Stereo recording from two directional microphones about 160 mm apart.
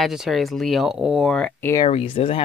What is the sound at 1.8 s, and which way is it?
Speech, 35° left (ahead or behind).